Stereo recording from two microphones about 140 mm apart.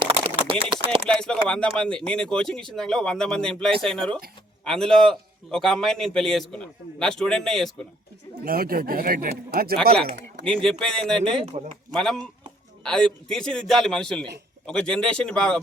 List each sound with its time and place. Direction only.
0.0 s a sound: 40° right (ahead or behind)
0.6 s chopping: 40° right (ahead or behind)
1.0 s a man's voice: 5° left (ahead or behind)
8.4 s speech: 90° right
10.6 s a man's voice: 5° left (ahead or behind)
11.5 s a man's voice: 55° right (ahead or behind)
11.9 s a man's voice: 5° left (ahead or behind)